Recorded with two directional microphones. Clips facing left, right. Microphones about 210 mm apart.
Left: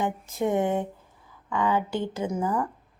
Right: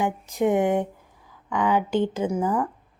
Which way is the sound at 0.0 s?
15° right (ahead or behind).